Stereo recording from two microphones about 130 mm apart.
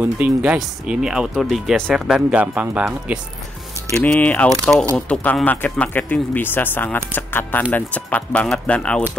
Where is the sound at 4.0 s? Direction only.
10° left (ahead or behind).